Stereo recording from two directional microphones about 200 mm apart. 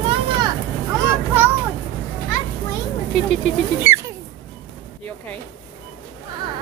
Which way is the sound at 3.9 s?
30° left (ahead or behind).